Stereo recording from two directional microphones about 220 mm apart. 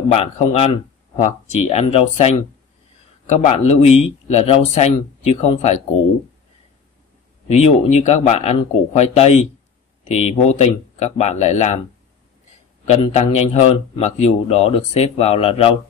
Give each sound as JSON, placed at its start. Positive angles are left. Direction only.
{"t": 0.1, "sound": "a man's voice", "side_deg": 30}
{"t": 3.3, "sound": "a man's voice", "side_deg": 30}
{"t": 7.4, "sound": "a man's voice", "side_deg": 30}
{"t": 12.8, "sound": "a man's voice", "side_deg": 30}